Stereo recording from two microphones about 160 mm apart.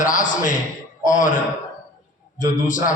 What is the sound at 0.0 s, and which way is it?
A man's voice, 55° left (ahead or behind).